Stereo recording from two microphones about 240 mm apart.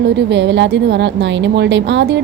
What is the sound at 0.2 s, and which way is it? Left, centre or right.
A woman's voice, right.